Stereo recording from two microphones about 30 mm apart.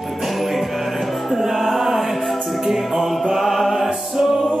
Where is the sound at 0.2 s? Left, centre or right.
Centre.